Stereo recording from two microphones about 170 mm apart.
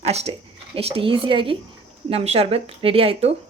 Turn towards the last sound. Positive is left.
turn(degrees=-35)  # may be behind; listen again after turning